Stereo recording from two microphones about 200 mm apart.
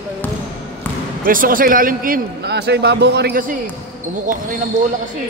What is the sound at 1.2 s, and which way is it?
A man's voice, 45° right (ahead or behind).